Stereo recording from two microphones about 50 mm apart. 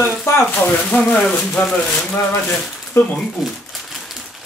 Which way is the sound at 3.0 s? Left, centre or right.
Left.